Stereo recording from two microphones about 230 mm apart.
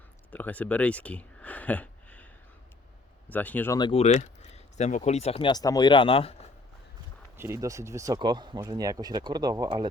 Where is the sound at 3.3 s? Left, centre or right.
Centre; by 6.4 s left.